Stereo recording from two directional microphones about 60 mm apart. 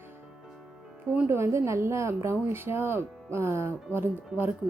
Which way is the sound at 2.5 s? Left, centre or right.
Right.